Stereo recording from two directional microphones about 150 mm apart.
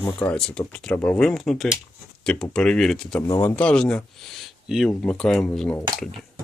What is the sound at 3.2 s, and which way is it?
Speech, 20° left (ahead or behind).